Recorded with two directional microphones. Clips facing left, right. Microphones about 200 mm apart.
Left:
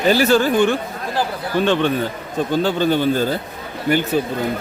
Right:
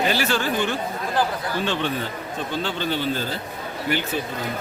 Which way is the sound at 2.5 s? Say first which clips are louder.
Left 9 dB; 45° left (ahead or behind).